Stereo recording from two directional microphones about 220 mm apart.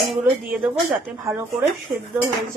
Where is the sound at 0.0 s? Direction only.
Centre (ahead or behind).